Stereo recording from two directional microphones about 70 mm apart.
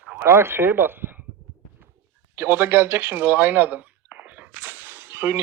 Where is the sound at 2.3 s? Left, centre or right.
Right.